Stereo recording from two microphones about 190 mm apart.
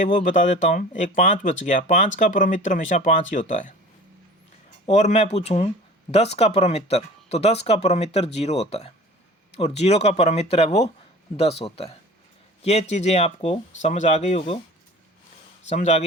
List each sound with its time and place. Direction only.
0.0 s speech: 45° left (ahead or behind)
4.9 s speech: 35° left (ahead or behind)
15.7 s speech: 35° left (ahead or behind)